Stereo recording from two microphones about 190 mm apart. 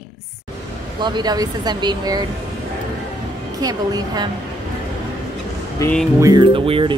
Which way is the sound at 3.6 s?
20° right (ahead or behind).